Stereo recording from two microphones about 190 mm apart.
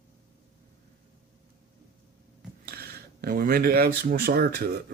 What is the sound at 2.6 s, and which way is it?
Speech, 55° right (ahead or behind).